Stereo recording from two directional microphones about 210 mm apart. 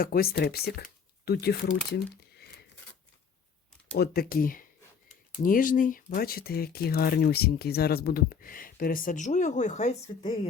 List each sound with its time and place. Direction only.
0.0 s speech: 45° left (ahead or behind)
3.9 s speech: 50° left (ahead or behind); by 10.5 s 30° left (ahead or behind)